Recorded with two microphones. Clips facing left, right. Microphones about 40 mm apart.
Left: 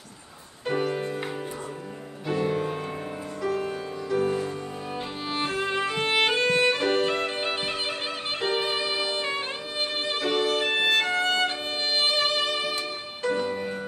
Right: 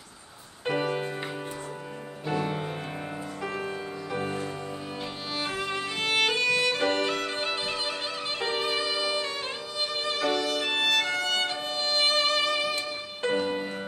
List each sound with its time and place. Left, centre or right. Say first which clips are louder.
0.7 s music: left 1 dB; right
2.3 s music: left 4 dB; right
5.3 s music: left 4 dB; left